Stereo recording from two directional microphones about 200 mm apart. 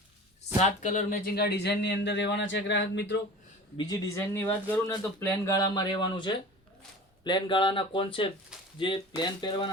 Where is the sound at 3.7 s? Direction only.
15° left (ahead or behind).